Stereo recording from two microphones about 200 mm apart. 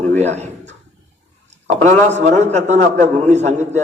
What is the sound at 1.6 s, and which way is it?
A man's voice, 35° right (ahead or behind).